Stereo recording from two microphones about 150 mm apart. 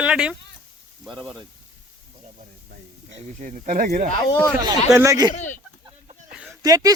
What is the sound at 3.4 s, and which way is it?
Speech, 55° right (ahead or behind).